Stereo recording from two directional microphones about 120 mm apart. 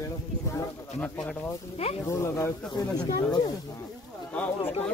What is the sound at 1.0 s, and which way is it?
Speech, 10° left (ahead or behind).